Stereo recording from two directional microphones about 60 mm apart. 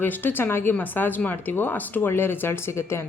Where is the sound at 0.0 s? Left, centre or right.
Left.